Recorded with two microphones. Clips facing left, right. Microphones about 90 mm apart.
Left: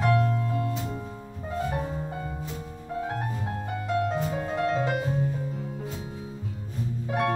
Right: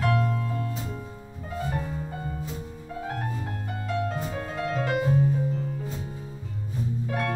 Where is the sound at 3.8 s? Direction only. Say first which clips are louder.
Left 3 dB; 20° left (ahead or behind).